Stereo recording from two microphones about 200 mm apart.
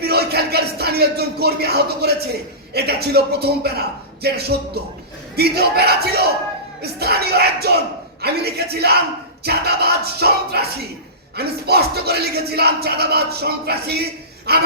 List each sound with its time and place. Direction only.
0.0 s music: 55° right (ahead or behind)
2.7 s speech: 55° right (ahead or behind)